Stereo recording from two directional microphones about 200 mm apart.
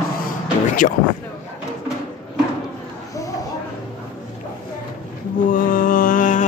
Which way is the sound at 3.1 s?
15° left (ahead or behind).